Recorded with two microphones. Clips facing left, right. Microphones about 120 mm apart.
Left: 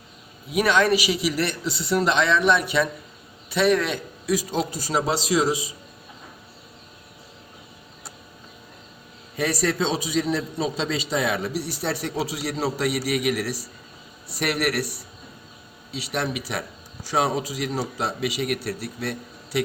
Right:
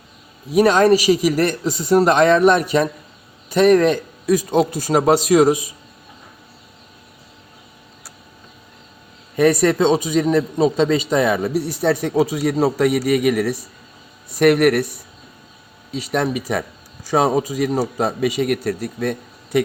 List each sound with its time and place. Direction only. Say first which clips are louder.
0.5 s a man's voice: right 7 dB; 40° right (ahead or behind)
9.3 s a man's voice: right 9 dB; 55° right (ahead or behind)
15.9 s a man's voice: right 7 dB; 45° right (ahead or behind)